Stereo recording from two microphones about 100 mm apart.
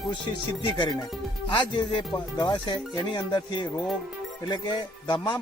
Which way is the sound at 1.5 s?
50° left (ahead or behind).